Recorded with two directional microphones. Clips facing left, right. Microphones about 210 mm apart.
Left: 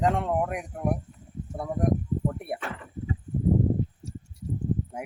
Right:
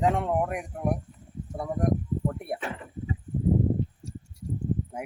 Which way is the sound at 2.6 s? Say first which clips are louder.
Right 1 dB; 15° right (ahead or behind).